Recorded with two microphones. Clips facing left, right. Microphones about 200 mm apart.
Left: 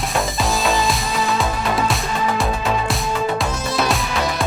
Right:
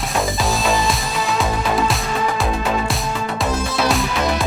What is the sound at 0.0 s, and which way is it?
Music, centre (ahead or behind).